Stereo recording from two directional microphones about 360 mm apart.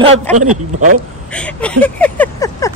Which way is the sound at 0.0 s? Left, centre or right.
Centre.